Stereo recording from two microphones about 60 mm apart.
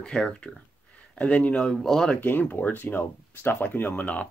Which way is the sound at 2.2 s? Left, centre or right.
Left.